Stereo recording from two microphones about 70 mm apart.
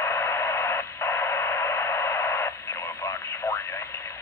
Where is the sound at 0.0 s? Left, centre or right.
Left.